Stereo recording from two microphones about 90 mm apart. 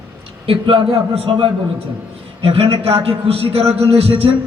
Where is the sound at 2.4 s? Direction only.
90° right.